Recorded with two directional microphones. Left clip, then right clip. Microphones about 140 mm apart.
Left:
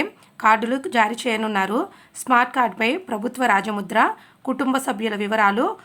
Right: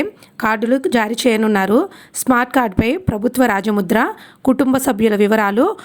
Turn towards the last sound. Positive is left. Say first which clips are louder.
# right 4 dB
turn(degrees=-55)  # may be behind; listen again after turning